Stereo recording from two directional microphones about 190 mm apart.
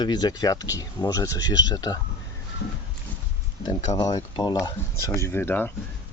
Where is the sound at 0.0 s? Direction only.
20° left (ahead or behind).